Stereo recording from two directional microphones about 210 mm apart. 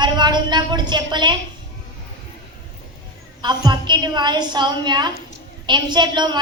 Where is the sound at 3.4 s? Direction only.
20° right (ahead or behind).